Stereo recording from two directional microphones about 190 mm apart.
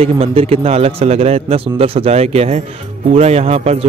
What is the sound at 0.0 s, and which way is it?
Speech, 30° right (ahead or behind).